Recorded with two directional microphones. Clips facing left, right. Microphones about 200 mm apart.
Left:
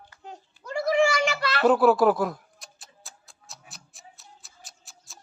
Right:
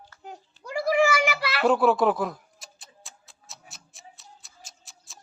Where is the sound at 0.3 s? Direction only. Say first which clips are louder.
Left 1 dB; 10° right (ahead or behind).